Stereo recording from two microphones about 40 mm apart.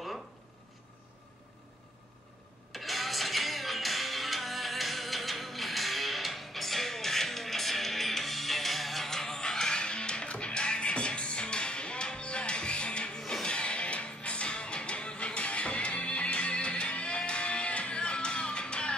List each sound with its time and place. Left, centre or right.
2.7 s music: centre; by 18.9 s left